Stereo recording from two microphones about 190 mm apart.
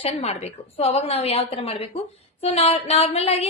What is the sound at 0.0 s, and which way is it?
Speech, 35° left (ahead or behind).